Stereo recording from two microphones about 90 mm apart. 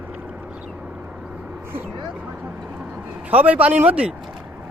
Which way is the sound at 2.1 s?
20° right (ahead or behind).